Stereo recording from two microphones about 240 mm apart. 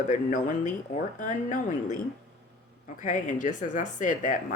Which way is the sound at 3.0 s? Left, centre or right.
Left.